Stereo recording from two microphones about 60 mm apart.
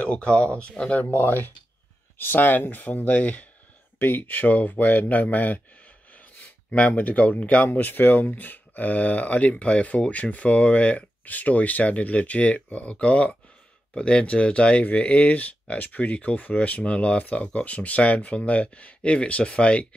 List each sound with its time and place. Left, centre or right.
0.0 s speech: centre
6.1 s gasp: left
7.0 s speech: left